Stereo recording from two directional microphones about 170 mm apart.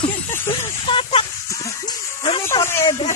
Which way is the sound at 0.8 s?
30° left (ahead or behind).